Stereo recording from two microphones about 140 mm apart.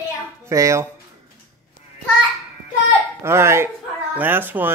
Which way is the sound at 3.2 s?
20° right (ahead or behind).